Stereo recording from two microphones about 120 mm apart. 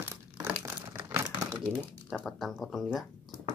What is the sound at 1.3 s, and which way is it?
Crumpling, 35° right (ahead or behind).